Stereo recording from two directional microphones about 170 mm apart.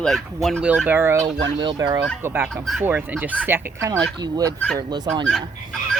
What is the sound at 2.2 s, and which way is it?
Speech, 10° right (ahead or behind).